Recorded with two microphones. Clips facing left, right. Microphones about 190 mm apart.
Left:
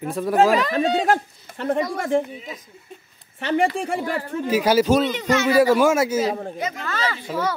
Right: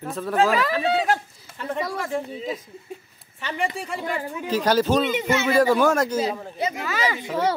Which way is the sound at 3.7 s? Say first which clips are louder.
Left 4 dB; 50° left (ahead or behind).